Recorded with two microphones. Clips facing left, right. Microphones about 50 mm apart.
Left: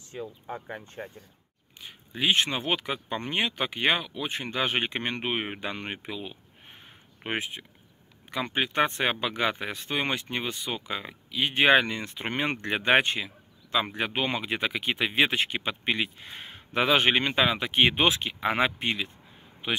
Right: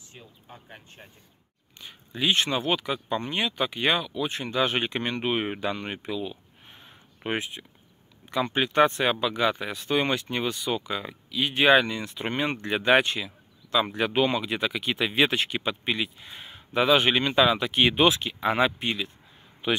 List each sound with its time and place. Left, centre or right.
0.2 s speech: left
1.0 s speech: left
1.8 s a sound: centre
2.6 s speech: left
5.8 s a sound: left
7.2 s speech: left
9.9 s speech: left
11.2 s speech: left